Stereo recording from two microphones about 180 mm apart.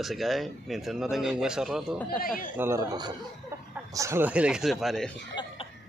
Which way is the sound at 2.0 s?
55° left (ahead or behind).